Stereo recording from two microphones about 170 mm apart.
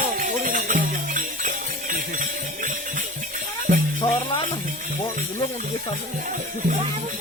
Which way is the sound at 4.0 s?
30° left (ahead or behind).